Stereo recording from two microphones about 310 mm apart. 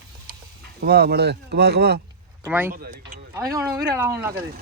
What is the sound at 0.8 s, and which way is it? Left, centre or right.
Speech, right.